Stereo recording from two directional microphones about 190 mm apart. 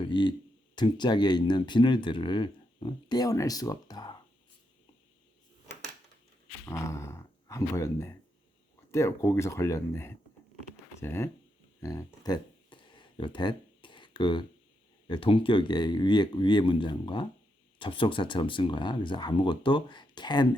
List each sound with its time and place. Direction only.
0.0 s speech: 25° left (ahead or behind)
6.7 s speech: 15° left (ahead or behind)
11.8 s a sound: 15° left (ahead or behind)
15.0 s speech: 25° left (ahead or behind)